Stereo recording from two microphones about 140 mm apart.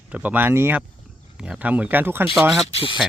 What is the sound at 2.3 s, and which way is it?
Speech, centre (ahead or behind).